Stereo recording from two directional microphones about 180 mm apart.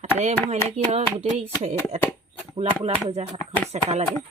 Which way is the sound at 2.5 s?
35° right (ahead or behind).